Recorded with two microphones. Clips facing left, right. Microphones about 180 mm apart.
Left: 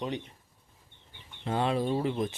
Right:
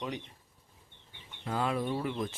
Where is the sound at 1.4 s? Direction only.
25° left (ahead or behind).